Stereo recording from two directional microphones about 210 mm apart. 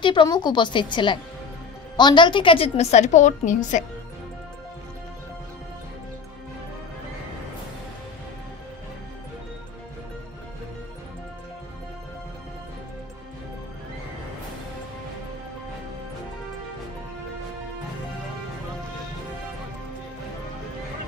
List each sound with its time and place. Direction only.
0.0 s a woman's voice: 20° left (ahead or behind)